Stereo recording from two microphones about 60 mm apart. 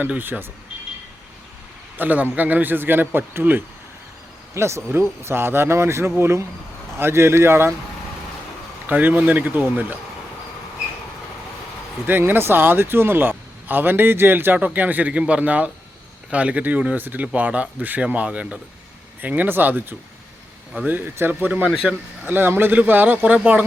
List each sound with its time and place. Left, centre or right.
0.0 s speech: right
2.0 s speech: right
4.5 s a man's voice: right
8.9 s speech: right
12.0 s speech: right
21.7 s a man's voice: centre
22.2 s speech: right